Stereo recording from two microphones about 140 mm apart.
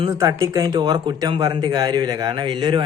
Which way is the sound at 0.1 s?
20° right (ahead or behind).